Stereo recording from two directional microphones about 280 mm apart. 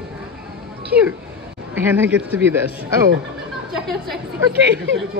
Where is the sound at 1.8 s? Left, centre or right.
Centre.